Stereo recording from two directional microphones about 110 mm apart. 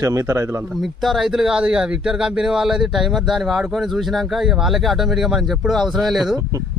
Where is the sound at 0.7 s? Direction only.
Centre (ahead or behind).